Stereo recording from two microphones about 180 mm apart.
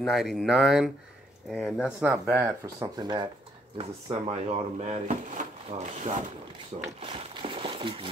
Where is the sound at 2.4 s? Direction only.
20° right (ahead or behind).